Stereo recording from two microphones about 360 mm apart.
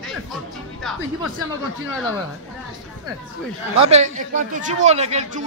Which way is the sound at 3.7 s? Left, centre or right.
Centre.